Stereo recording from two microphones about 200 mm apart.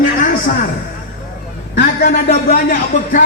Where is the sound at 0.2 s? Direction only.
40° left (ahead or behind).